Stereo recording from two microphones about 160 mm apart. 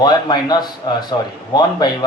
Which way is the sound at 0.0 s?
25° left (ahead or behind).